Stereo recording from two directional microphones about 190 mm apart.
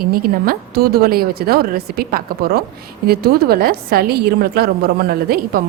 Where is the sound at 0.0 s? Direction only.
50° right (ahead or behind).